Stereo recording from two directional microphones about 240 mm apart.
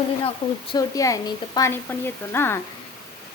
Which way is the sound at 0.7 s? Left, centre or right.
Centre.